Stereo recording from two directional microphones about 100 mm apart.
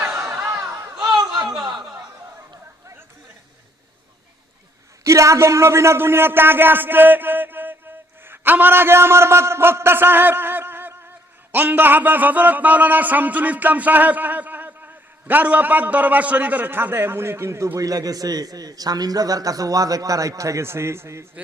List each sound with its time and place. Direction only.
0.0 s a sound: 25° right (ahead or behind)
1.4 s chuckle: 5° right (ahead or behind)
5.0 s a man's voice: 30° right (ahead or behind)